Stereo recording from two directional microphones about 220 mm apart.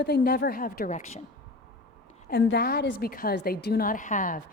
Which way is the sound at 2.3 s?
45° left (ahead or behind).